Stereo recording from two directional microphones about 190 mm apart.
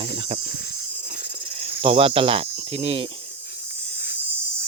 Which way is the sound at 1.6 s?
30° right (ahead or behind).